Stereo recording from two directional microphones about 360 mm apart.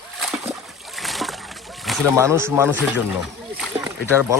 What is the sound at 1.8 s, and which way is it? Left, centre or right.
Speech, centre.